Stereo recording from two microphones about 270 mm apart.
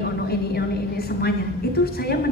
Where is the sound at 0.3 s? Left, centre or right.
Left.